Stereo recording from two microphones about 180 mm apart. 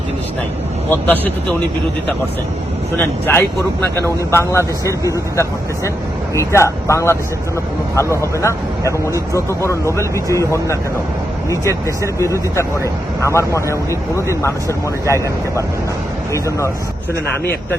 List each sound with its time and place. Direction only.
0.9 s speech: 10° left (ahead or behind)
3.0 s speech: 10° left (ahead or behind)